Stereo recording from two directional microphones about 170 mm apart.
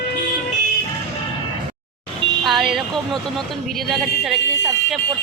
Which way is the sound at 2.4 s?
Centre (ahead or behind).